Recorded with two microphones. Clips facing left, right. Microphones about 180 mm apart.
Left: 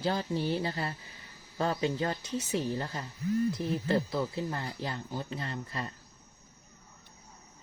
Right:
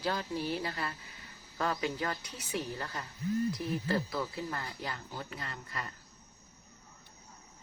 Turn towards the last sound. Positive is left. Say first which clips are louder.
# left 5 dB
turn(degrees=25)  # may be behind; listen again after turning